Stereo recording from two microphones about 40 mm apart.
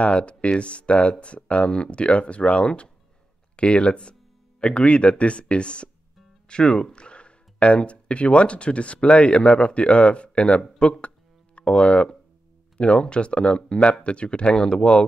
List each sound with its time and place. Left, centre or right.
0.0 s speech: left